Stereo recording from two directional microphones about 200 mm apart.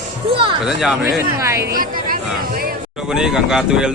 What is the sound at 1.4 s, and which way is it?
Speech, 15° right (ahead or behind).